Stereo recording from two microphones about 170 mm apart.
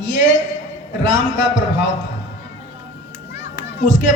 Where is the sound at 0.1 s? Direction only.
45° left (ahead or behind).